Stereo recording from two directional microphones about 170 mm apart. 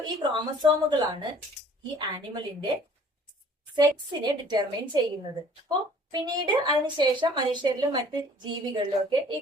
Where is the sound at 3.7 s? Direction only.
25° right (ahead or behind).